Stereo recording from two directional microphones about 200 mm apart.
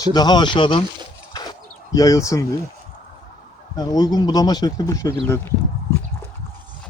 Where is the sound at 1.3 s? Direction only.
20° left (ahead or behind).